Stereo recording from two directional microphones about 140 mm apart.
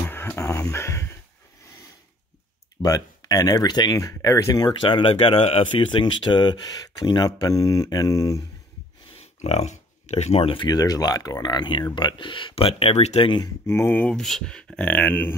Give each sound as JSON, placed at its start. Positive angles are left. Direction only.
{"t": 0.1, "sound": "music", "side_deg": 20}
{"t": 2.8, "sound": "speech", "side_deg": 25}
{"t": 9.1, "sound": "speech", "side_deg": 50}
{"t": 13.7, "sound": "speech", "side_deg": 15}